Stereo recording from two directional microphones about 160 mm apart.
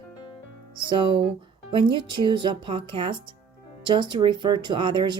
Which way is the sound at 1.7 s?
30° right (ahead or behind).